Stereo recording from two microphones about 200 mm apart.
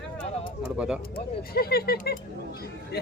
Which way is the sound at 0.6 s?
5° right (ahead or behind).